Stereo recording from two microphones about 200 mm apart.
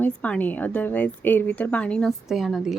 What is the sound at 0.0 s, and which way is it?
A woman's voice, 5° left (ahead or behind).